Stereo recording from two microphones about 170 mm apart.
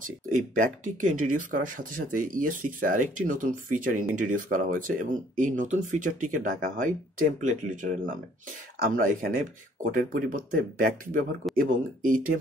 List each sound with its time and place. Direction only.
1.0 s speech: 50° right (ahead or behind)
11.4 s speech: centre (ahead or behind)
12.0 s speech: 55° right (ahead or behind)